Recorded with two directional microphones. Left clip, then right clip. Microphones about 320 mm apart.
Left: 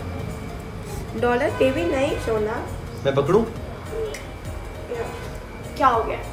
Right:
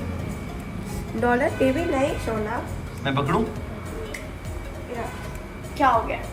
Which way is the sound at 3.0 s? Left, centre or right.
Centre.